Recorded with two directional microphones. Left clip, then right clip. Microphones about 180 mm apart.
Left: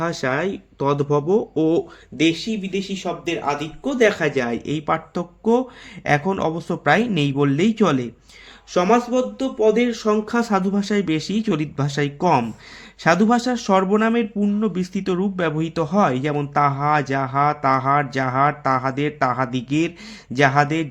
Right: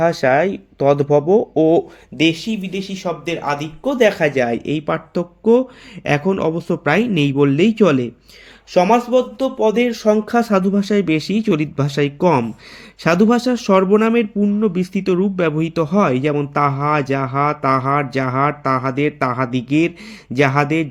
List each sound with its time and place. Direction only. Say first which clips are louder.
0.0 s speech: right 8 dB; 15° right (ahead or behind)
2.1 s speech: right 3 dB; 30° right (ahead or behind); by 8.1 s 15° right (ahead or behind)
8.7 s speech: right 4 dB; 30° right (ahead or behind)